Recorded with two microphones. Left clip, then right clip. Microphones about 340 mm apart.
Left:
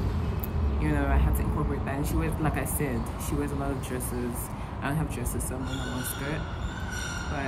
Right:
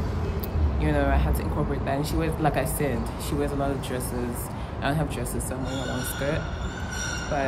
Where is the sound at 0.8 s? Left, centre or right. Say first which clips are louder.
Right 5 dB; centre.